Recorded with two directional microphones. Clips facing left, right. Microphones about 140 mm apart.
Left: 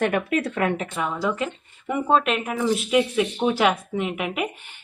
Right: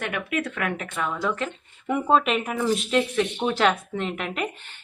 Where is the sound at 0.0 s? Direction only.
40° left (ahead or behind).